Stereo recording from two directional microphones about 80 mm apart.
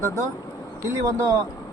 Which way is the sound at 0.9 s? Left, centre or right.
Right.